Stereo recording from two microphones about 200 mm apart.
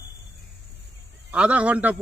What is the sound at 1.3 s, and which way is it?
Speech, 5° right (ahead or behind).